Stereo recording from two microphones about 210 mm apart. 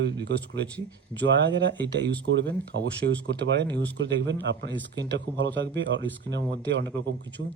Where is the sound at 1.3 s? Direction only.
55° right (ahead or behind).